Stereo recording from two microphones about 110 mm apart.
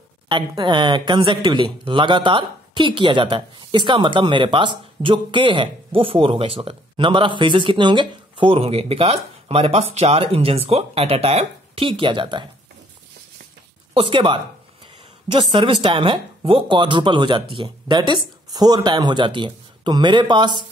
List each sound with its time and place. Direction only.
0.3 s speech: 45° right (ahead or behind)
8.5 s speech: 65° right (ahead or behind); by 12.4 s 45° right (ahead or behind)
13.9 s speech: 50° right (ahead or behind)